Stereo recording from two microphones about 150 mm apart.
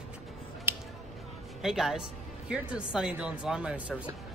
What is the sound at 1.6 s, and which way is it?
A man's voice, centre (ahead or behind).